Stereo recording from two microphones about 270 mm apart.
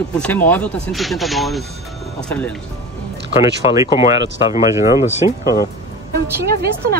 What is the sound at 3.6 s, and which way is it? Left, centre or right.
Speech, left.